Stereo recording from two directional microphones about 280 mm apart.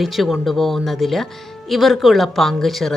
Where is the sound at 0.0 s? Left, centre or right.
Centre.